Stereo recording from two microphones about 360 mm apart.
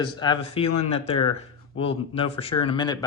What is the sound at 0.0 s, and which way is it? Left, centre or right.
Speech, centre.